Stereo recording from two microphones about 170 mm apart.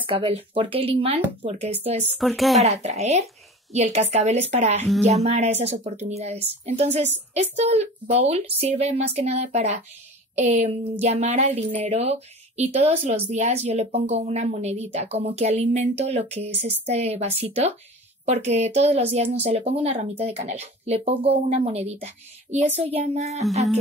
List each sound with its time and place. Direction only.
0.0 s a woman's voice: 30° right (ahead or behind)
2.1 s speech: centre (ahead or behind)
2.6 s a woman's voice: 40° right (ahead or behind)